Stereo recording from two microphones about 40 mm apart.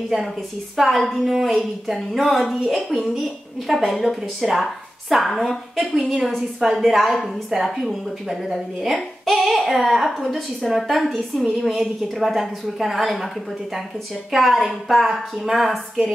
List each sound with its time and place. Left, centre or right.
0.7 s a woman's voice: centre